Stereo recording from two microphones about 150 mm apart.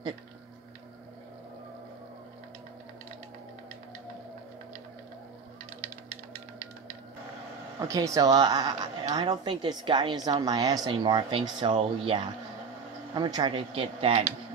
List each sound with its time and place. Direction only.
7.9 s speech: 20° right (ahead or behind); by 14.3 s 40° right (ahead or behind)